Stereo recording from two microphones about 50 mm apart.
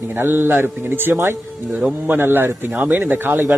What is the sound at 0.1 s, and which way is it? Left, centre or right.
Speech, right.